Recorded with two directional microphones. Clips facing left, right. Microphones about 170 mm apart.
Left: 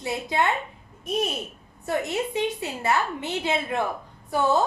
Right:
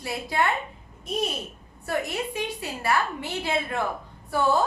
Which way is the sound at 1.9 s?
20° left (ahead or behind).